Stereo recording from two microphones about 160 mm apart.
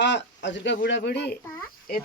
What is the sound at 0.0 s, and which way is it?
Speech, 90° left.